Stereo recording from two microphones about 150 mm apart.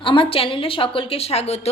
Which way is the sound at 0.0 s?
35° left (ahead or behind).